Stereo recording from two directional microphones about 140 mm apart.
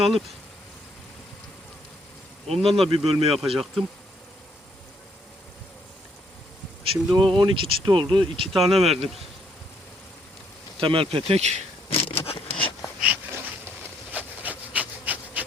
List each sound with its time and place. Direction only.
2.5 s speech: 45° right (ahead or behind)
6.8 s speech: 35° right (ahead or behind)
10.8 s speech: 40° right (ahead or behind)
11.9 s a sound: 40° left (ahead or behind)
13.0 s a sound: 10° right (ahead or behind)
14.7 s pant: 10° right (ahead or behind)